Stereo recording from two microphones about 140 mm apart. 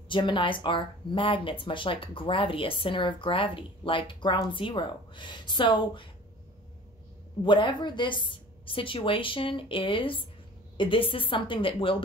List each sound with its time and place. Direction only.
0.1 s speech: 35° left (ahead or behind)
7.4 s speech: 35° left (ahead or behind)